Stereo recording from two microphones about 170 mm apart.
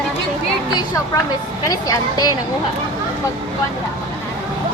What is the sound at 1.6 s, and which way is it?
Speech, 20° left (ahead or behind).